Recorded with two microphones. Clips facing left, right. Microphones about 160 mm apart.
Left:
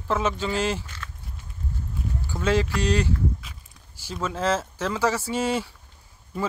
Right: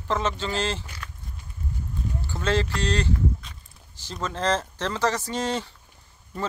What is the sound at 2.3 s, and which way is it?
Speech, 10° left (ahead or behind).